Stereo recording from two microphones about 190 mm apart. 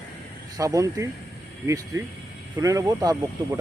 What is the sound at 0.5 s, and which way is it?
Speech, 20° right (ahead or behind).